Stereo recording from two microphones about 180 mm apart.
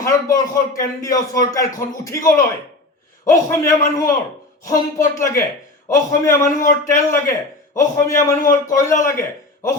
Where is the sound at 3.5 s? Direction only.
15° left (ahead or behind).